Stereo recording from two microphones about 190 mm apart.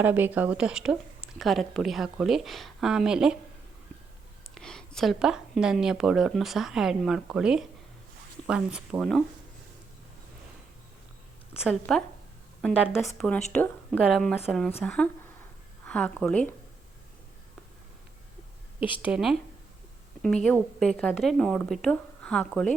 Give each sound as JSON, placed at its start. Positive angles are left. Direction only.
{"t": 0.0, "sound": "speech", "side_deg": -10}
{"t": 4.5, "sound": "speech", "side_deg": 5}
{"t": 11.5, "sound": "speech", "side_deg": 0}
{"t": 19.0, "sound": "speech", "side_deg": -5}